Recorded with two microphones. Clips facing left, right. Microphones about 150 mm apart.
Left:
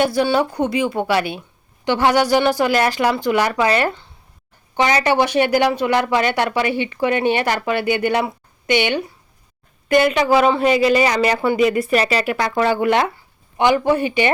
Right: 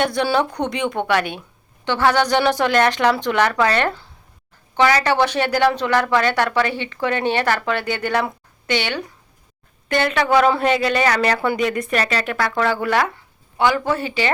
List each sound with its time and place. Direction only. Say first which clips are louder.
0.0 s a woman's voice: left 2 dB; 5° left (ahead or behind)